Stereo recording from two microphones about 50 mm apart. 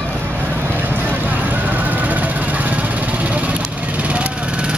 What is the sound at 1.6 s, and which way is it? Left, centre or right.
Vehicle, right.